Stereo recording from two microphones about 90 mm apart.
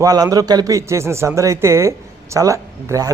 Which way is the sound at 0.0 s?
40° right (ahead or behind).